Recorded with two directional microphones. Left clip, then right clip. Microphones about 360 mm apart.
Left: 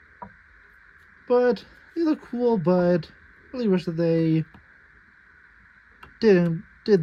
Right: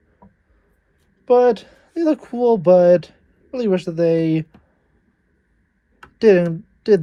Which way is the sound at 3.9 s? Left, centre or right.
Right.